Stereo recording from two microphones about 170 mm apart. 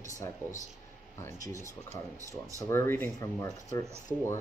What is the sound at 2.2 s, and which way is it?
Speech, 20° right (ahead or behind).